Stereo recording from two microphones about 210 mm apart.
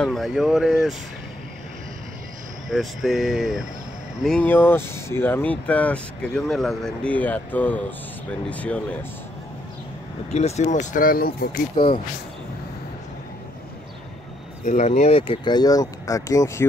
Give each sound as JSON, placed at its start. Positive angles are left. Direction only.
{"t": 0.0, "sound": "speech", "side_deg": 0}
{"t": 2.7, "sound": "speech", "side_deg": 0}
{"t": 10.3, "sound": "speech", "side_deg": 30}
{"t": 11.7, "sound": "speech", "side_deg": 25}
{"t": 14.6, "sound": "speech", "side_deg": 35}